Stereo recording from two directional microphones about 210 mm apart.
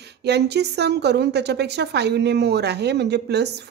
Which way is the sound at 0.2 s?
50° right (ahead or behind).